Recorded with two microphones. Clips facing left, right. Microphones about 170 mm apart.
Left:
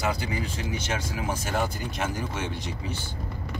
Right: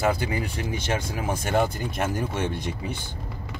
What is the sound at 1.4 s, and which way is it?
Speech, 55° right (ahead or behind).